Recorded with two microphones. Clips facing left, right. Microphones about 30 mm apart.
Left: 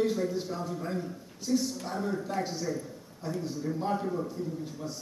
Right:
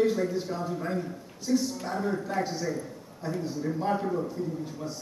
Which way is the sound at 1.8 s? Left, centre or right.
Centre.